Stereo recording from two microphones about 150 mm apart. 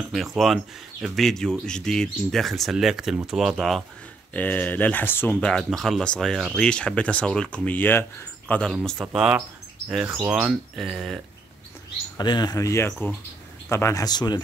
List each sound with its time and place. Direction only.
0.1 s speech: centre (ahead or behind)
4.3 s speech: 10° left (ahead or behind)
9.0 s speech: 5° right (ahead or behind)
12.2 s speech: 30° left (ahead or behind)